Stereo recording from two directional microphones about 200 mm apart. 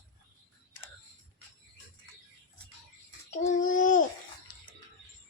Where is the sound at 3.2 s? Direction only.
40° left (ahead or behind).